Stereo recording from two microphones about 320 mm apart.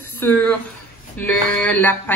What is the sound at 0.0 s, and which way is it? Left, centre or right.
Speech, centre.